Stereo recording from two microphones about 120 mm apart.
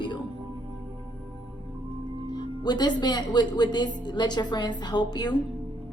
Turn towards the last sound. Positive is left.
turn(degrees=35)  # may be behind; listen again after turning